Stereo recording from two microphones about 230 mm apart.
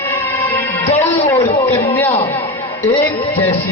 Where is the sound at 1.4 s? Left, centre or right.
Centre.